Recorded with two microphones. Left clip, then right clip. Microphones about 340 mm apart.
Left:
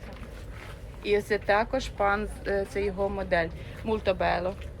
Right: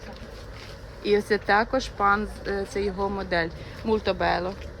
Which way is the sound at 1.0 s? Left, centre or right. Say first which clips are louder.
Right 3 dB; centre.